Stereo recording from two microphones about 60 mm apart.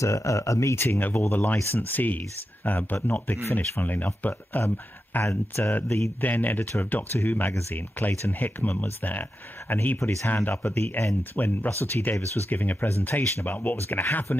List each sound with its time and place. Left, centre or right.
0.0 s speech: left
0.7 s speech: left
5.2 s speech: left
6.2 s speech: left